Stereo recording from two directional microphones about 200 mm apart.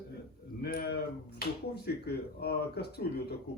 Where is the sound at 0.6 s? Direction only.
50° left (ahead or behind).